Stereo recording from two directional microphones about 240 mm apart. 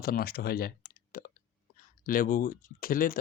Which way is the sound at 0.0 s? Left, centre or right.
Left.